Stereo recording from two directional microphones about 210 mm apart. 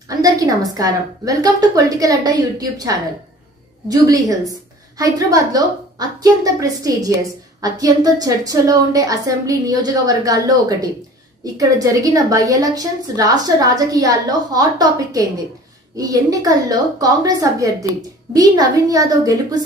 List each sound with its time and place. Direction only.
0.2 s a woman's voice: 15° right (ahead or behind)